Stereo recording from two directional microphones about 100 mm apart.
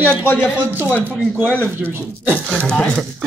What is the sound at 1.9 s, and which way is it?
Speech, 25° right (ahead or behind).